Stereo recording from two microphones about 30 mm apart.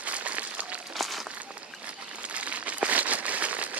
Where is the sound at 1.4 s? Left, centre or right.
Right.